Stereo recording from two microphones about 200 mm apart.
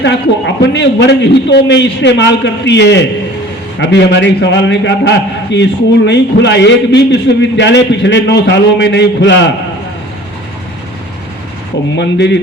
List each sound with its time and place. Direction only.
0.0 s a man's voice: 60° left (ahead or behind)
11.9 s a man's voice: 60° left (ahead or behind)